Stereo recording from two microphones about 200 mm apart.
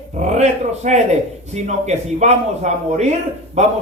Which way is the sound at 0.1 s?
35° right (ahead or behind).